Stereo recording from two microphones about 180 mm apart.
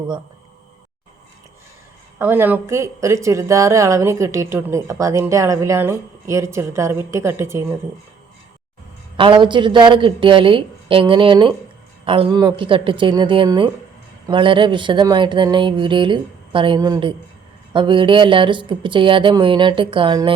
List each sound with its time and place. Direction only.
2.1 s a woman's voice: 10° right (ahead or behind)
9.1 s speech: 30° right (ahead or behind)